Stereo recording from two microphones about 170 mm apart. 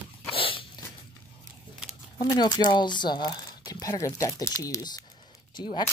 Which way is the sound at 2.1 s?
25° left (ahead or behind).